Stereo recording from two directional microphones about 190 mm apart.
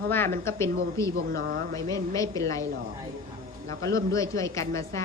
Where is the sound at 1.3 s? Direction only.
50° right (ahead or behind).